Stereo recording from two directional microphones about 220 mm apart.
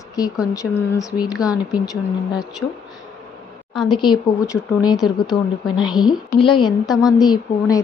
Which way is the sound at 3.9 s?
20° left (ahead or behind).